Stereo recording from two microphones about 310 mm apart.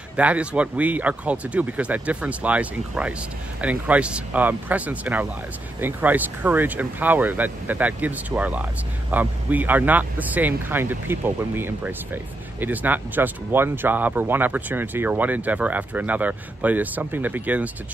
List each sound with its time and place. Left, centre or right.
0.1 s speech: centre